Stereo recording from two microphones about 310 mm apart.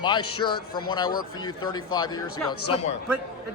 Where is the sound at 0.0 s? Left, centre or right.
Centre.